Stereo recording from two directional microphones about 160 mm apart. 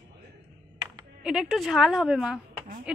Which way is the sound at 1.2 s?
5° right (ahead or behind).